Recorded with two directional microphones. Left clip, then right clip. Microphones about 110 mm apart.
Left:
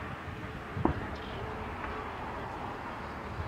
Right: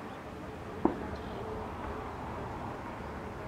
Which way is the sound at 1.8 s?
45° left (ahead or behind).